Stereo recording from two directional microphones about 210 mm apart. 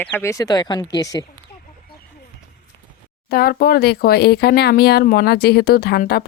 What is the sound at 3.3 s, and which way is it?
Speech, 45° left (ahead or behind).